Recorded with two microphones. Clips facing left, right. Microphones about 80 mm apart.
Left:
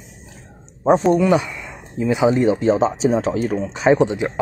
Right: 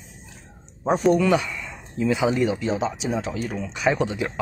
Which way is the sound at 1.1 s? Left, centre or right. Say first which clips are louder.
Left 4 dB; left.